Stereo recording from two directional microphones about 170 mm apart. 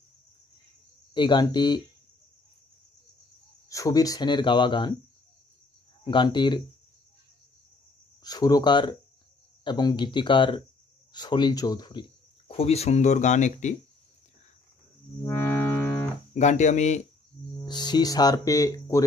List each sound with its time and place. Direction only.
1.1 s speech: 25° left (ahead or behind)
3.6 s speech: 20° left (ahead or behind)
6.0 s speech: 25° left (ahead or behind)
8.2 s speech: 20° left (ahead or behind); by 13.7 s 45° left (ahead or behind)
15.2 s music: 15° left (ahead or behind)
16.3 s speech: 45° left (ahead or behind)
17.6 s speech: 25° left (ahead or behind)